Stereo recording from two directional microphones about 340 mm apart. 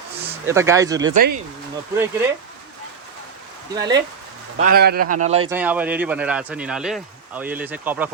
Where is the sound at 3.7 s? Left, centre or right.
Centre.